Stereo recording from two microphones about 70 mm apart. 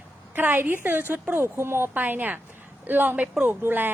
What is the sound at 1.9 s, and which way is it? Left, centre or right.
A woman's voice, right.